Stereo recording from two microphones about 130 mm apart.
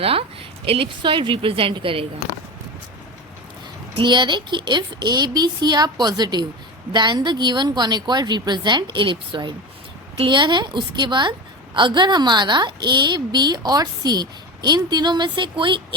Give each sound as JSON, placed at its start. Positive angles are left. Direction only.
{"t": 0.0, "sound": "a woman's voice", "side_deg": -45}
{"t": 3.9, "sound": "a woman's voice", "side_deg": -35}